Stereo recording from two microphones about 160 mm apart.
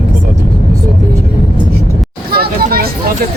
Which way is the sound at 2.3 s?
70° right (ahead or behind).